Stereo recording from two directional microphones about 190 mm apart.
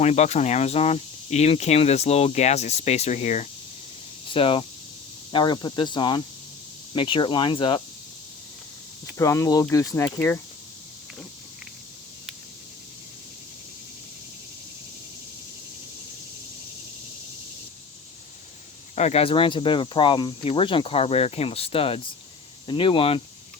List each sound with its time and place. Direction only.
0.0 s speech: 35° left (ahead or behind)
9.1 s speech: 15° left (ahead or behind)
18.9 s speech: 35° left (ahead or behind)